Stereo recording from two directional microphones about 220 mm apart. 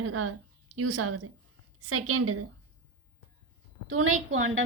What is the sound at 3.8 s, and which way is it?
Speech, 75° right (ahead or behind).